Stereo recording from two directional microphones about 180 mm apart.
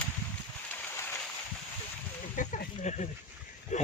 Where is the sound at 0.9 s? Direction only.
15° left (ahead or behind).